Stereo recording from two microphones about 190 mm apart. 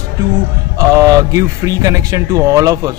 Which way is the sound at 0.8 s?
15° right (ahead or behind).